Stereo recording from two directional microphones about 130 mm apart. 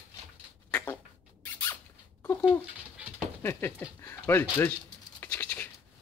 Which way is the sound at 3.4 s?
20° left (ahead or behind).